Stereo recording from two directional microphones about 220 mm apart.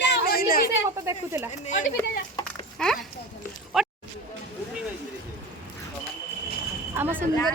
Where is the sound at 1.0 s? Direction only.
15° right (ahead or behind).